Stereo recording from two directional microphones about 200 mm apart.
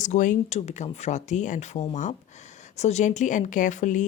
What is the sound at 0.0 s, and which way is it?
Speech, 40° left (ahead or behind).